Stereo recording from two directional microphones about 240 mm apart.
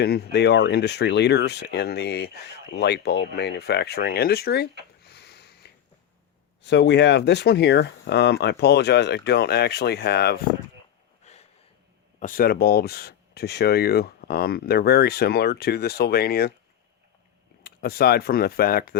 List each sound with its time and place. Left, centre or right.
0.0 s speech: left
5.0 s a sound: left
6.6 s speech: left
11.3 s a sound: left
12.2 s speech: left
17.6 s speech: left